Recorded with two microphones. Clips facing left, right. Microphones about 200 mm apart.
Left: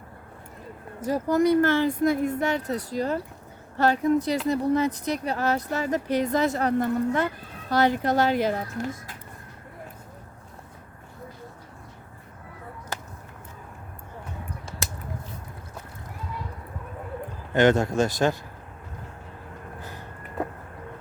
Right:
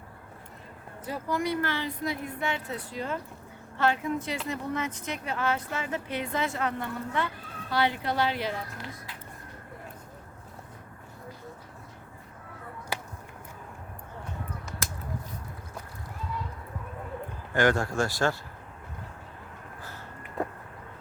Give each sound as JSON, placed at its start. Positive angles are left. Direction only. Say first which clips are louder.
{"t": 1.0, "sound": "speech", "louder": "left 9 dB", "side_deg": 40}
{"t": 17.5, "sound": "speech", "louder": "left 5 dB", "side_deg": 20}